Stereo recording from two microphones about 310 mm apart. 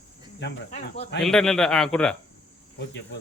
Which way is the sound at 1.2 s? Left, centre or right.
Centre.